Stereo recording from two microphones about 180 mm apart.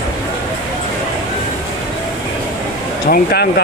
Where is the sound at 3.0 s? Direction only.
60° left (ahead or behind).